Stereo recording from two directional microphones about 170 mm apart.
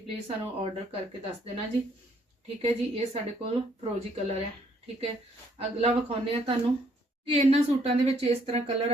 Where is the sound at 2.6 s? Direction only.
35° right (ahead or behind).